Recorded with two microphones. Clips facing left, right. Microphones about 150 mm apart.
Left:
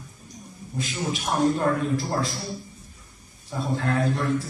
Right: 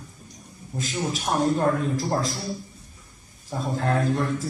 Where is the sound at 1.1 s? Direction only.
35° right (ahead or behind).